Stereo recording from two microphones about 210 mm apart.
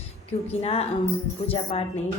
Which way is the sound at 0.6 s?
30° left (ahead or behind).